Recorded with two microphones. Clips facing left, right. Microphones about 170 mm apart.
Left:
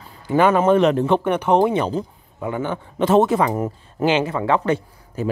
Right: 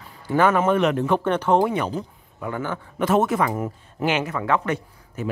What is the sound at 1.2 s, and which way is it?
Speech, 15° left (ahead or behind).